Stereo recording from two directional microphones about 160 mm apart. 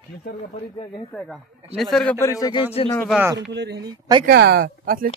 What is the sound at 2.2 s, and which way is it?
Speech, 20° left (ahead or behind).